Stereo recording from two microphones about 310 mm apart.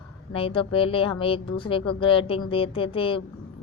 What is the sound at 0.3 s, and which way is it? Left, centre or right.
A woman's voice, centre.